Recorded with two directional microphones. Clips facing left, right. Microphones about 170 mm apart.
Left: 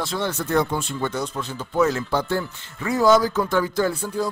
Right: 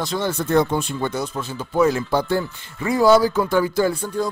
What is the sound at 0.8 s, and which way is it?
Speech, 15° right (ahead or behind).